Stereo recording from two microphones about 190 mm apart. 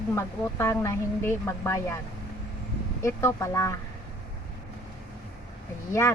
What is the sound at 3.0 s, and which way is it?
Speech, 15° left (ahead or behind).